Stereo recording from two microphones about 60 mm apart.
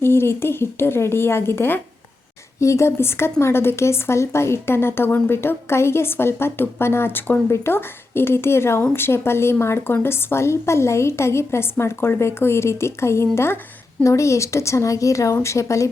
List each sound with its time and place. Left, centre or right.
0.0 s a woman's voice: left
2.6 s a woman's voice: left
14.0 s speech: left